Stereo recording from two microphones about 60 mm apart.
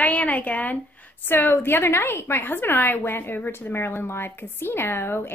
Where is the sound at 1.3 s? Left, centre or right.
Left.